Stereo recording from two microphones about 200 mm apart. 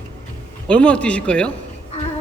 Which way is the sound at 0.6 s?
5° left (ahead or behind).